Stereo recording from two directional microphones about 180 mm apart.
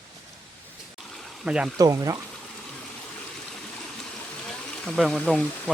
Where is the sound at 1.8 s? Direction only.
20° right (ahead or behind).